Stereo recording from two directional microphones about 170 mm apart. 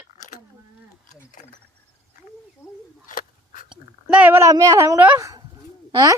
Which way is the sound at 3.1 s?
50° left (ahead or behind).